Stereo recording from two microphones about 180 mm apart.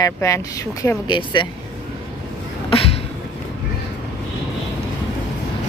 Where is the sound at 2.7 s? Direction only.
30° left (ahead or behind).